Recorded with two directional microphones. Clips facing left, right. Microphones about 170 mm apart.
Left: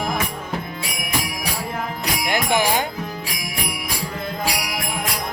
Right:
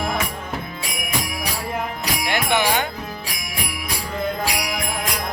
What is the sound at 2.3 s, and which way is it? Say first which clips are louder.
Speech: left 1 dB; 35° left (ahead or behind).